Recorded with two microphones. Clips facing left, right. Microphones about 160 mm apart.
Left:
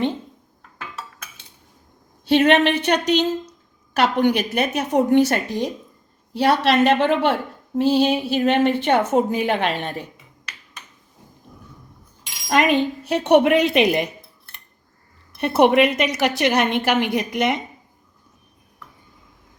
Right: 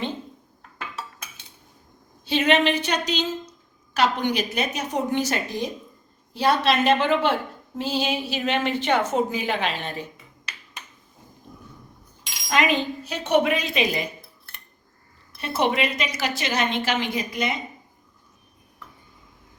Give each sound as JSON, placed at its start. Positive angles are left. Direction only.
{"t": 2.2, "sound": "a woman's voice", "side_deg": 65}
{"t": 12.5, "sound": "a woman's voice", "side_deg": 55}
{"t": 15.4, "sound": "a woman's voice", "side_deg": 65}